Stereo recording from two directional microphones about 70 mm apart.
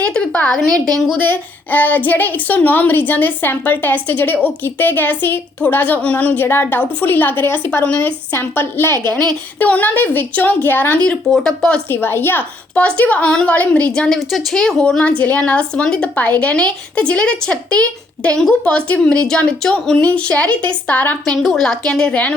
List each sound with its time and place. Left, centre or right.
0.0 s a woman's voice: centre
1.2 s a woman's voice: left
6.0 s a woman's voice: centre; by 9.0 s left
9.6 s a woman's voice: left
11.0 s speech: centre
11.9 s a woman's voice: left
14.1 s speech: centre
20.0 s a woman's voice: left
21.2 s speech: centre